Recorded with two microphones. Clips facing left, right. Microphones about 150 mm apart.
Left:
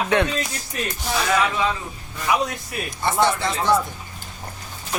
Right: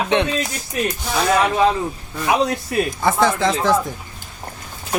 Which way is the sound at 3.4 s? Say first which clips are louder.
Right 5 dB; 90° right.